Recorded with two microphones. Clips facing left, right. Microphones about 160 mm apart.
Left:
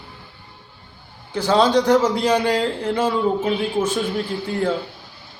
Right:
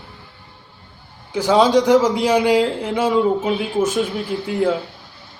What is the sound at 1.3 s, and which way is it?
A man's voice, 10° right (ahead or behind).